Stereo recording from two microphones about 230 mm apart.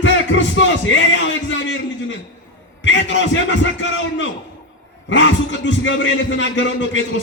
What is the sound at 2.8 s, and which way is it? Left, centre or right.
A man's voice, left.